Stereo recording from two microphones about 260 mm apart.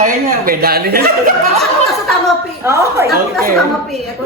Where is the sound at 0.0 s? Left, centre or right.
Right.